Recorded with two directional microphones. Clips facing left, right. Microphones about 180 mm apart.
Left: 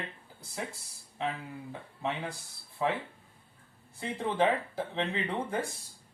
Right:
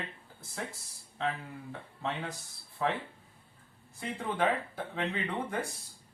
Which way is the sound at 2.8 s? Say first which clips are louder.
Left 1 dB; 15° left (ahead or behind).